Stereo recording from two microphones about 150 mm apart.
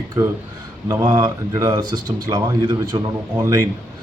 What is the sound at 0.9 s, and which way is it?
Speech, 25° right (ahead or behind).